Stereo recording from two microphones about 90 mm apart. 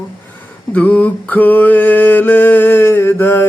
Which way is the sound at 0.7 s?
15° left (ahead or behind).